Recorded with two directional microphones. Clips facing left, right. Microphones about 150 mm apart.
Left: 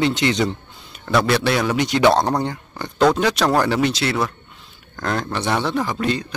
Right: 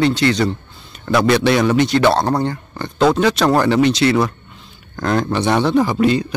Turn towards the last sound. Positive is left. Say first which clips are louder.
# right 7 dB
turn(degrees=-5)  # may be behind; listen again after turning